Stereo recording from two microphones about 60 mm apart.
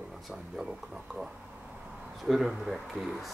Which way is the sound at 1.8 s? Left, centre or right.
Centre.